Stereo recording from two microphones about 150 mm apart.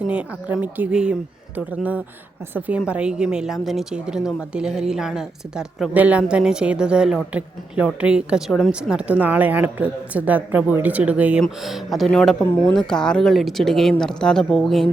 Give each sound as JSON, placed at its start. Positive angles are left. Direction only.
{"t": 0.0, "sound": "a woman's voice", "side_deg": -10}